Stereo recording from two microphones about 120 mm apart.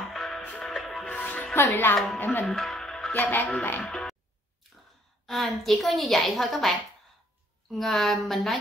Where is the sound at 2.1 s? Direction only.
15° left (ahead or behind).